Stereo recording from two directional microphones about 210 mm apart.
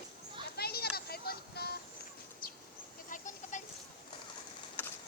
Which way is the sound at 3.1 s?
35° left (ahead or behind).